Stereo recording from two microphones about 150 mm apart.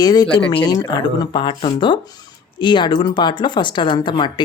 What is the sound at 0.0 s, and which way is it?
Speech, 25° left (ahead or behind).